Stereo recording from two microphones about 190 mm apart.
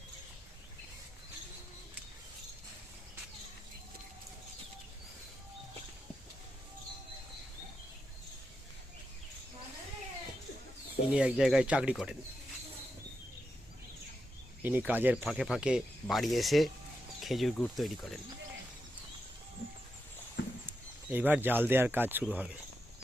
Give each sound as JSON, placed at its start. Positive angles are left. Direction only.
{"t": 11.1, "sound": "speech", "side_deg": -5}
{"t": 14.6, "sound": "speech", "side_deg": -10}
{"t": 20.7, "sound": "speech", "side_deg": -10}